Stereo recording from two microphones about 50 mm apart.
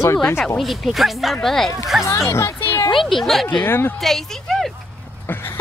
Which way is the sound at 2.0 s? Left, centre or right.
Left.